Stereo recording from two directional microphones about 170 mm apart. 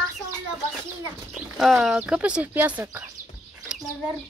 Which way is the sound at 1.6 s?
Centre (ahead or behind).